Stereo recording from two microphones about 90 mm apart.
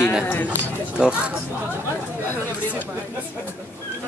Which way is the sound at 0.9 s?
10° right (ahead or behind).